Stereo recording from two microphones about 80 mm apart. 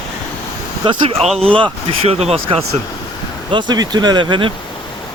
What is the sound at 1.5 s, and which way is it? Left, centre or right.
Speech, right.